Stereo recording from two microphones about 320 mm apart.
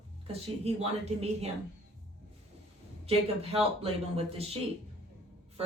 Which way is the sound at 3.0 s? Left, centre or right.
Centre.